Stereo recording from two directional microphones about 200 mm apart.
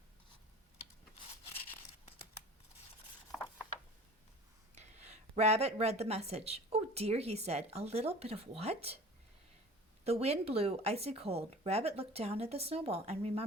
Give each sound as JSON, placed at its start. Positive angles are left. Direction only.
{"t": 4.7, "sound": "a woman's voice", "side_deg": -35}
{"t": 10.0, "sound": "speech", "side_deg": -30}